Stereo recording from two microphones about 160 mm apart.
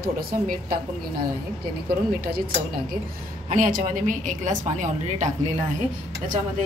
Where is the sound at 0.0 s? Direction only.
65° right (ahead or behind).